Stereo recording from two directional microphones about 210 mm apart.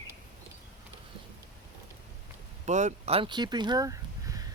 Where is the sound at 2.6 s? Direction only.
35° right (ahead or behind); by 4.5 s 15° right (ahead or behind).